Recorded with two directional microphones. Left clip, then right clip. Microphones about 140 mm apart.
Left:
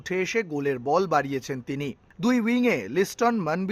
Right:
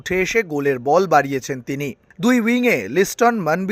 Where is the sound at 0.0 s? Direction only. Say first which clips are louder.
Right 7 dB; 35° right (ahead or behind).